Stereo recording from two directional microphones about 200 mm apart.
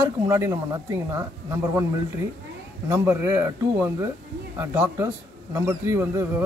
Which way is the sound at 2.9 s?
15° right (ahead or behind).